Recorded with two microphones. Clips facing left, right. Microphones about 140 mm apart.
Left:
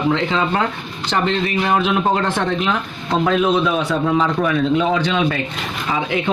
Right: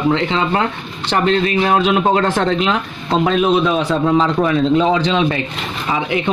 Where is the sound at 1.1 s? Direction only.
35° right (ahead or behind).